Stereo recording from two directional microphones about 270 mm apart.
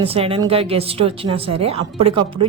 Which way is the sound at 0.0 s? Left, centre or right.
Right.